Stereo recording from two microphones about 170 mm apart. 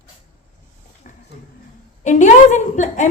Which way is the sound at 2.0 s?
45° left (ahead or behind).